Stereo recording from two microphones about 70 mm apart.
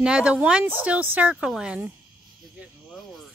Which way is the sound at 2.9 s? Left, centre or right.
Centre.